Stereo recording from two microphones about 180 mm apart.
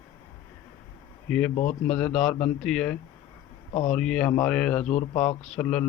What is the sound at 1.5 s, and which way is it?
Speech, 40° left (ahead or behind).